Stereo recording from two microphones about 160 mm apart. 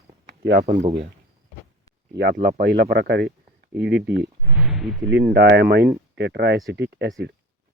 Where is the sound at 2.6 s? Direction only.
90° right.